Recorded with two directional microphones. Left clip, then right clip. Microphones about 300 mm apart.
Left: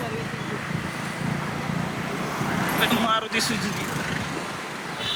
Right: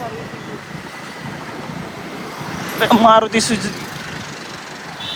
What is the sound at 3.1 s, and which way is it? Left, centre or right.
Speech, right.